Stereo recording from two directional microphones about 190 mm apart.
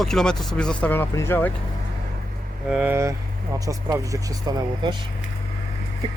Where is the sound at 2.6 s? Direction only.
5° right (ahead or behind); by 4.9 s 20° right (ahead or behind).